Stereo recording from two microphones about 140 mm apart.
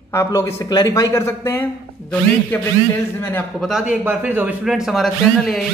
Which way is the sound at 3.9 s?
10° right (ahead or behind).